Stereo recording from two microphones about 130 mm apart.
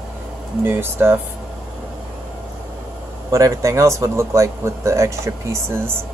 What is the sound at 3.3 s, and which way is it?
Speech, 25° right (ahead or behind).